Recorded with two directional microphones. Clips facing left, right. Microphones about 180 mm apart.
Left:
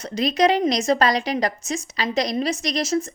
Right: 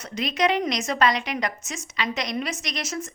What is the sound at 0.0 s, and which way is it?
A woman's voice, 35° left (ahead or behind).